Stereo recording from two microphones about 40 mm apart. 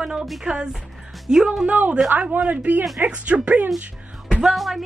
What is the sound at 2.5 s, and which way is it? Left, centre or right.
Speech, right.